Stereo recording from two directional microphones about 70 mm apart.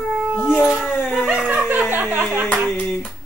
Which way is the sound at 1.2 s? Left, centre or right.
Centre.